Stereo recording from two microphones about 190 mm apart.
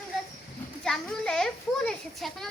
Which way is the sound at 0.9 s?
5° left (ahead or behind).